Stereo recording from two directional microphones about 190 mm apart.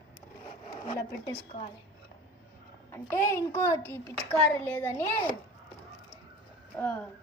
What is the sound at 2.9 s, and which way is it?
A child's voice, 15° left (ahead or behind).